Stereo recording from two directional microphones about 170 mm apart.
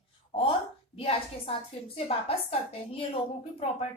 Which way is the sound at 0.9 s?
35° left (ahead or behind).